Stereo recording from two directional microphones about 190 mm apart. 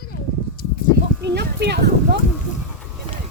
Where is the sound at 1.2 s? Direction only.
60° right (ahead or behind).